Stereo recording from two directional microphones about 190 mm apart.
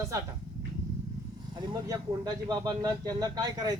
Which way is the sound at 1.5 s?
20° right (ahead or behind).